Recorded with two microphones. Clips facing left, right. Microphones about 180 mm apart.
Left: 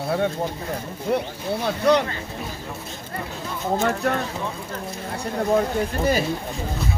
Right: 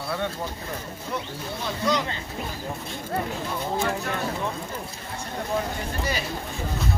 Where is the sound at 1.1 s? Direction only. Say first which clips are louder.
Left 8 dB; 65° left (ahead or behind).